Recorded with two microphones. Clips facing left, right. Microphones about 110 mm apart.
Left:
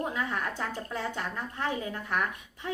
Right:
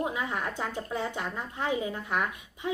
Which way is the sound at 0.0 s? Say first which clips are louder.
Right 1 dB; 15° right (ahead or behind).